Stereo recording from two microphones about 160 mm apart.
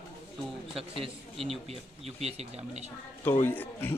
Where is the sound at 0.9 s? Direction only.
35° right (ahead or behind).